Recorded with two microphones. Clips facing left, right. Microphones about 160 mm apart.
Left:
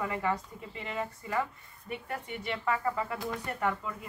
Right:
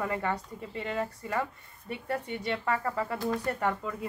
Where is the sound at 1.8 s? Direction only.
35° right (ahead or behind).